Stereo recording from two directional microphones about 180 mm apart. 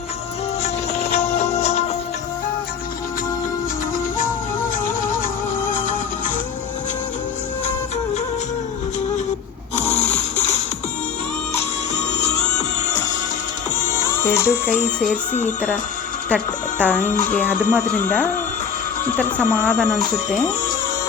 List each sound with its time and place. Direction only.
0.6 s music: 35° left (ahead or behind)
11.5 s music: 40° left (ahead or behind)
14.1 s music: 15° left (ahead or behind)
15.3 s speech: 40° left (ahead or behind)
16.3 s speech: 10° left (ahead or behind)
17.2 s speech: 50° left (ahead or behind)
17.7 s speech: 10° left (ahead or behind)
19.4 s speech: 10° left (ahead or behind)